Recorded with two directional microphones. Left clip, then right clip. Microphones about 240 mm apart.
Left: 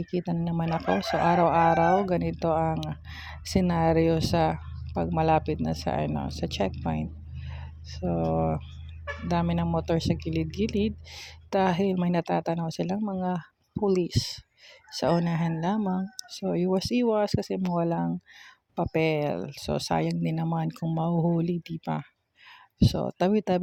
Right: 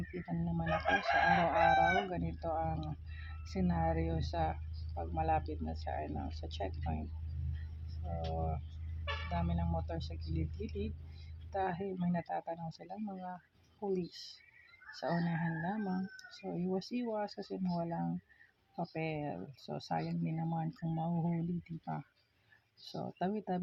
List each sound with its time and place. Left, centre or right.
0.1 s speech: left